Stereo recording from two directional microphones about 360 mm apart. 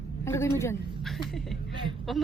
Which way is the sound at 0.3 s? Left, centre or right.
Centre.